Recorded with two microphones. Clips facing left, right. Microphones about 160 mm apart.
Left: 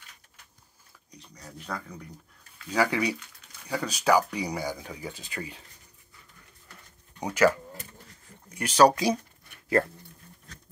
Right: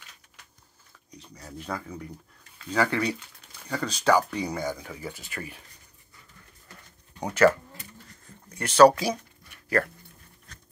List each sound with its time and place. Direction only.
1.1 s speech: 5° right (ahead or behind)
2.7 s speech: 10° left (ahead or behind)
7.2 s speech: 10° left (ahead or behind)